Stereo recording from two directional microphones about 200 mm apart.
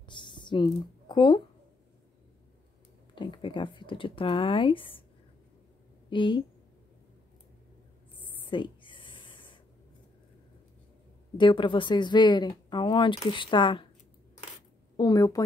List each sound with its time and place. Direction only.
0.1 s a sound: 25° left (ahead or behind)
3.2 s speech: 25° left (ahead or behind)
6.0 s a woman's voice: 25° left (ahead or behind)
8.5 s a sound: 25° left (ahead or behind)
11.3 s speech: 25° left (ahead or behind)
15.0 s speech: 20° left (ahead or behind)